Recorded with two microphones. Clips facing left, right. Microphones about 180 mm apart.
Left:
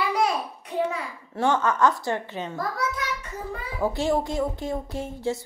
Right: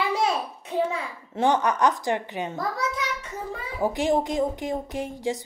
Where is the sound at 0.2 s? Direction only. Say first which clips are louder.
Even; 25° right (ahead or behind).